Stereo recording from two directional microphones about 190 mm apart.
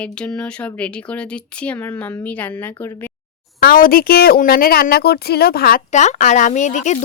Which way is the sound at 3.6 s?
50° left (ahead or behind).